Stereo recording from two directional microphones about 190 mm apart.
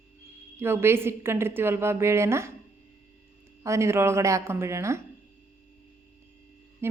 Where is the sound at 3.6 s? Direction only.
15° right (ahead or behind).